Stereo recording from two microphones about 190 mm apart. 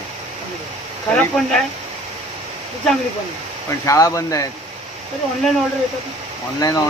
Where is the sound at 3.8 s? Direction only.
15° left (ahead or behind).